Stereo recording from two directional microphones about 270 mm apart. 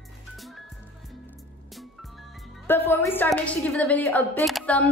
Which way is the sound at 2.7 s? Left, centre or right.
Centre.